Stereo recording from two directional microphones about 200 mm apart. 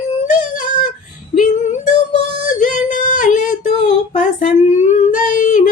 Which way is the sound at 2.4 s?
40° left (ahead or behind).